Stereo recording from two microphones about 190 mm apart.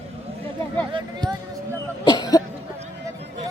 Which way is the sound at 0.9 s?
25° right (ahead or behind).